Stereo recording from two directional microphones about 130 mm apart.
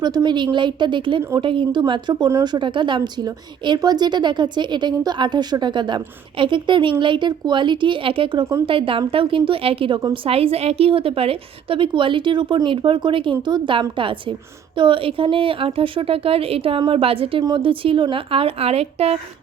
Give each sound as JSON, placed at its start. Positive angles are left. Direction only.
{"t": 0.0, "sound": "a woman's voice", "side_deg": -30}